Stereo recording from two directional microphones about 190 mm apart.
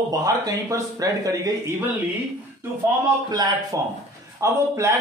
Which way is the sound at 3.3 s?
20° right (ahead or behind).